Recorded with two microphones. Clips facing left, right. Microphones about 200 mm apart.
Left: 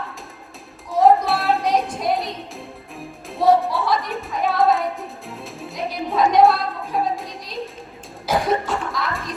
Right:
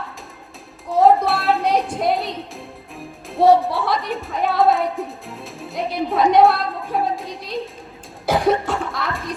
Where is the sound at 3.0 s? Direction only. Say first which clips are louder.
Right 3 dB; centre (ahead or behind).